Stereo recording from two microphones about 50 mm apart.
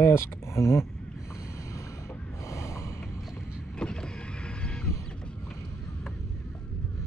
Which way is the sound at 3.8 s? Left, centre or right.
Centre.